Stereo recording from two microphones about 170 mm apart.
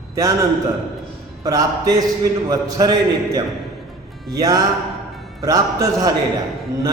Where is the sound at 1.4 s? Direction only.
20° right (ahead or behind).